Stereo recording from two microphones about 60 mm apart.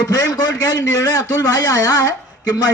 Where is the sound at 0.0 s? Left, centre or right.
Left.